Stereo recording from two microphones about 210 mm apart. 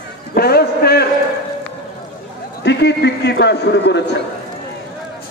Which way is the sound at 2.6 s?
55° left (ahead or behind).